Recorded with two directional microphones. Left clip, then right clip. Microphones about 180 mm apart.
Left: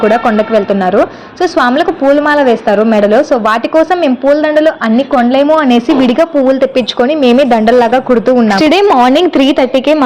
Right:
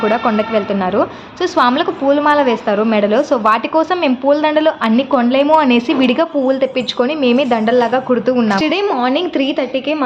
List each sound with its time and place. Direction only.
0.0 s a woman's voice: 25° left (ahead or behind)
8.4 s a woman's voice: 40° left (ahead or behind)